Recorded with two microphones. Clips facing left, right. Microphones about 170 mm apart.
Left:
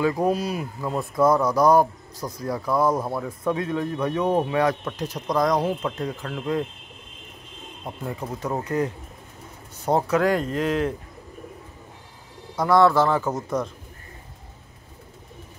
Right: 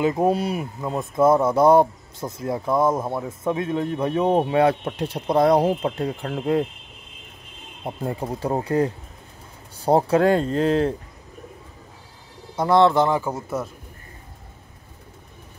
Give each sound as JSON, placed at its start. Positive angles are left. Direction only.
{"t": 0.0, "sound": "speech", "side_deg": -25}
{"t": 7.8, "sound": "speech", "side_deg": -30}
{"t": 12.5, "sound": "speech", "side_deg": -25}